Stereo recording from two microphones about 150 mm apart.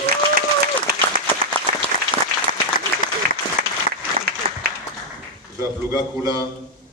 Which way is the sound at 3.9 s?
75° right (ahead or behind).